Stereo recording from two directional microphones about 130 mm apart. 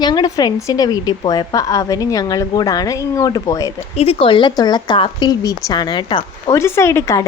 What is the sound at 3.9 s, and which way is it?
Speech, 45° left (ahead or behind).